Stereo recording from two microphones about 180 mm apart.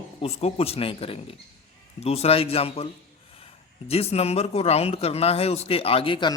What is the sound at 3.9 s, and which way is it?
Speech, 35° left (ahead or behind).